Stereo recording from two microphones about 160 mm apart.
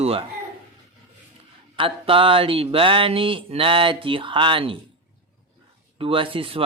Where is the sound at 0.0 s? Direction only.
40° right (ahead or behind).